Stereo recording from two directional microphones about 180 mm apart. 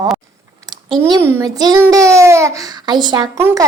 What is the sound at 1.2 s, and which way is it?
A child's voice, 10° right (ahead or behind).